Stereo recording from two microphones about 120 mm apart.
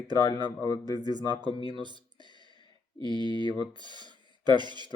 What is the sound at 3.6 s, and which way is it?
Speech, 40° right (ahead or behind).